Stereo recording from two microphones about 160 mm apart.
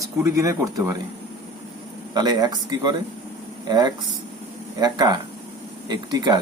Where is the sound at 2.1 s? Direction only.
25° right (ahead or behind).